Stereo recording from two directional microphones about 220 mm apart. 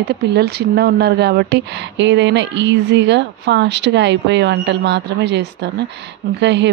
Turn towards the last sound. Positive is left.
turn(degrees=-55)  # may be behind; listen again after turning